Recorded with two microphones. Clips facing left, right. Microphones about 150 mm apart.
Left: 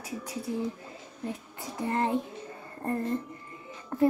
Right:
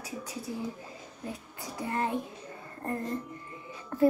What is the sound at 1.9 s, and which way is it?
Child singing, 30° left (ahead or behind).